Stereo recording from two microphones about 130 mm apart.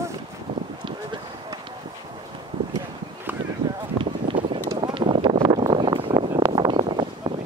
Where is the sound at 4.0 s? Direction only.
40° right (ahead or behind).